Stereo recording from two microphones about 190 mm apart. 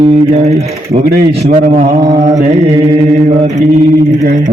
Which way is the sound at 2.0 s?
20° right (ahead or behind).